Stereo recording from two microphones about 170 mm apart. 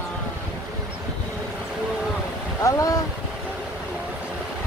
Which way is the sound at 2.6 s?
20° left (ahead or behind).